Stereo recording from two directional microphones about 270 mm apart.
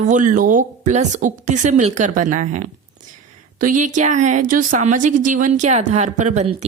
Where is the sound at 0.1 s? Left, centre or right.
Right.